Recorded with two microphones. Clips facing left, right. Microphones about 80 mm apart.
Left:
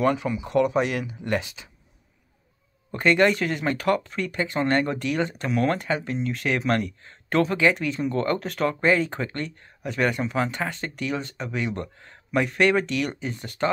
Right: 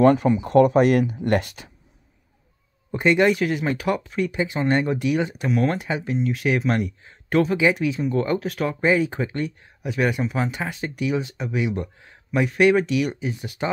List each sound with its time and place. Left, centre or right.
0.0 s speech: right
2.9 s speech: centre